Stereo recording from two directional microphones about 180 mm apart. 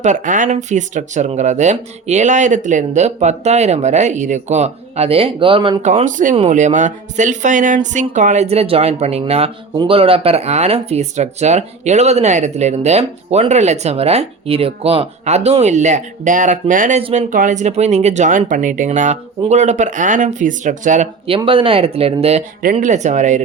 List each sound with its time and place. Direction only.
0.0 s speech: 45° right (ahead or behind); by 5.8 s 30° right (ahead or behind)
5.8 s speech: 40° right (ahead or behind)
17.0 s speech: 35° right (ahead or behind)
17.2 s speech: 45° right (ahead or behind)
21.2 s speech: 30° right (ahead or behind)